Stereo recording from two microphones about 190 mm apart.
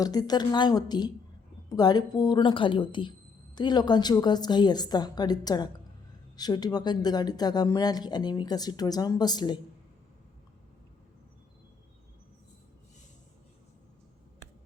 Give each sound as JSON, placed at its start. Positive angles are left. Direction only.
{"t": 0.0, "sound": "speech", "side_deg": 20}